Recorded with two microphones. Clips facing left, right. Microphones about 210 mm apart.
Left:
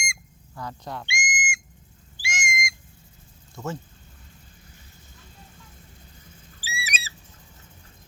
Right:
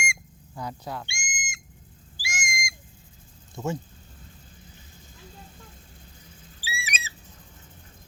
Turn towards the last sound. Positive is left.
turn(degrees=40)  # may be behind; listen again after turning